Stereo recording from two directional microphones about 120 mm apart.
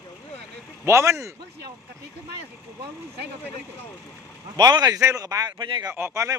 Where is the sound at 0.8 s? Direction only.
25° right (ahead or behind).